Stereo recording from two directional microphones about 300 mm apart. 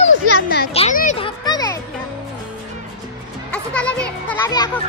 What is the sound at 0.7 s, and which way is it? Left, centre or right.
Music, left.